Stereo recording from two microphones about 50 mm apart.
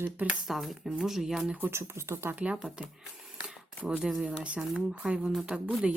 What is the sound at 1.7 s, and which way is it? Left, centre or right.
Speech, right.